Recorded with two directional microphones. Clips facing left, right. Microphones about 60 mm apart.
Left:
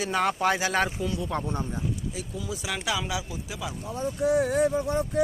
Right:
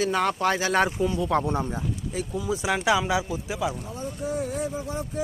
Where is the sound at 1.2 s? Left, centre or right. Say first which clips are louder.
Right 6 dB; right.